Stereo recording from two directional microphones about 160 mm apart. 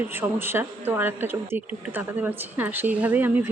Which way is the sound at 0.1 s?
15° right (ahead or behind).